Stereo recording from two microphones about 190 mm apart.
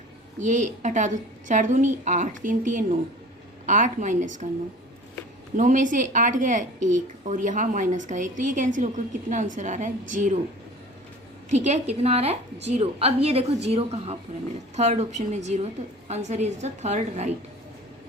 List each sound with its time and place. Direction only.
0.3 s a woman's voice: 40° right (ahead or behind)
5.5 s a woman's voice: 40° right (ahead or behind)
11.5 s a woman's voice: 35° right (ahead or behind)